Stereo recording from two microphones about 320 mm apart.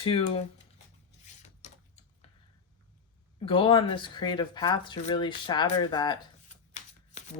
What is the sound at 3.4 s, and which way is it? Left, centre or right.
Speech, centre.